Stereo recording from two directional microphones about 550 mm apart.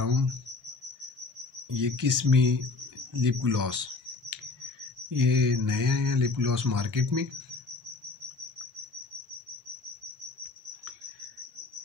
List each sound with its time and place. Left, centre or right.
0.0 s cricket: right
1.7 s speech: right
3.1 s a sound: right
5.1 s speech: right